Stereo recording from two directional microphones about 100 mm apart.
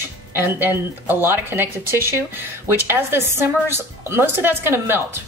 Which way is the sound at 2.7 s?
20° right (ahead or behind).